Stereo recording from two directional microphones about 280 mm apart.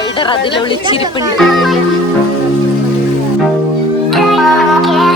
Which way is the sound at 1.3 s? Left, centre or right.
Centre.